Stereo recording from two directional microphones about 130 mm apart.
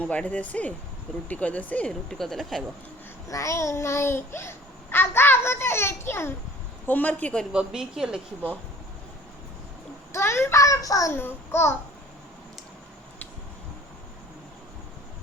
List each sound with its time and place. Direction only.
0.0 s speech: 10° left (ahead or behind)
3.2 s a child's voice: 25° left (ahead or behind)
7.5 s speech: 5° right (ahead or behind)
10.1 s a child's voice: 20° left (ahead or behind)